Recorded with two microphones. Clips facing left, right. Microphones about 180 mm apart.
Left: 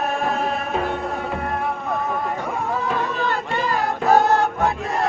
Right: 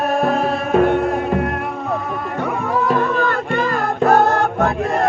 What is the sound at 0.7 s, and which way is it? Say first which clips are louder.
Music: right 9 dB; 55° right (ahead or behind).